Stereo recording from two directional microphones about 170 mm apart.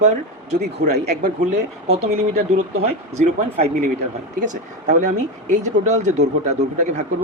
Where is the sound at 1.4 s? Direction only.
40° right (ahead or behind).